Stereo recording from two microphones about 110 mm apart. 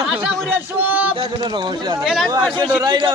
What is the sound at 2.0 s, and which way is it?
Speech, centre (ahead or behind).